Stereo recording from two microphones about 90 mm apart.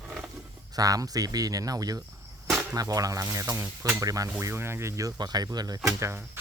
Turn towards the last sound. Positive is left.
turn(degrees=-30)  # may be behind; listen again after turning